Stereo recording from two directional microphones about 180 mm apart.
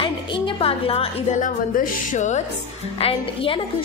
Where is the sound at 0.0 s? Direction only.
30° left (ahead or behind).